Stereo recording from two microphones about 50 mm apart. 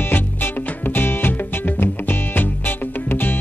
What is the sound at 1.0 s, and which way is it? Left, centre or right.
Music, left.